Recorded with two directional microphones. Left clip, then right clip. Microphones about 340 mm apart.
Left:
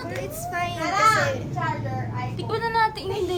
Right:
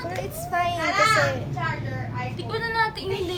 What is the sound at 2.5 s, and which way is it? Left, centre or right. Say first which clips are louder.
Speech: left 2 dB; centre.